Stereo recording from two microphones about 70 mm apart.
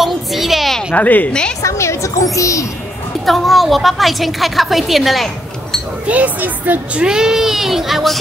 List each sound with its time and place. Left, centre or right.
0.0 s a child's voice: centre
0.9 s a woman's voice: left
1.6 s a woman's voice: left
3.3 s a woman's voice: centre
6.0 s speech: right; by 8.2 s centre